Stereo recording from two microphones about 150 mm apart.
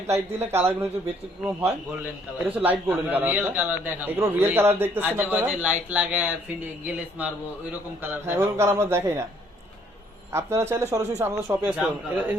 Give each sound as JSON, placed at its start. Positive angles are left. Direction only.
{"t": 0.1, "sound": "a man's voice", "side_deg": -15}
{"t": 10.3, "sound": "a man's voice", "side_deg": -15}